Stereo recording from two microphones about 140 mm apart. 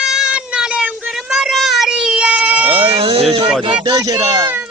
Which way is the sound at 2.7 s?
40° right (ahead or behind).